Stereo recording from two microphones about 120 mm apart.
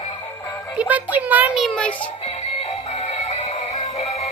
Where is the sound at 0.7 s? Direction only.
15° right (ahead or behind).